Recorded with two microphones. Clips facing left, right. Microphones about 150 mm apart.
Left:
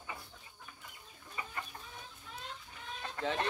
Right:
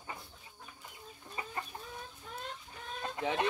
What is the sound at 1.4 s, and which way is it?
Chicken, 30° right (ahead or behind).